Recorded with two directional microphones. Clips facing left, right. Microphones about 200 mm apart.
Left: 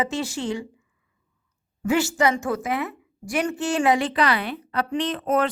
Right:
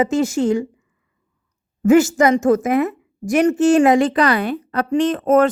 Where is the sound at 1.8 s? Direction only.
45° right (ahead or behind).